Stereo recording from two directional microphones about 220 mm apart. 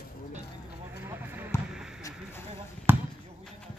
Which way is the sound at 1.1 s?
5° right (ahead or behind).